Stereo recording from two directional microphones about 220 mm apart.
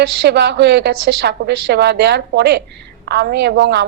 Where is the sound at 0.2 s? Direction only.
50° right (ahead or behind).